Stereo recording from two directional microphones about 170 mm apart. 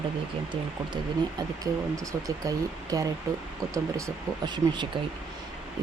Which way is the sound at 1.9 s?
20° right (ahead or behind).